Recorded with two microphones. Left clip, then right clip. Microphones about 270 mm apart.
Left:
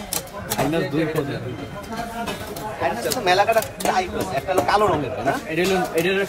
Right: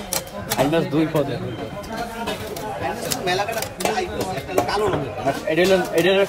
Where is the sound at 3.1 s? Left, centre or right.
Centre.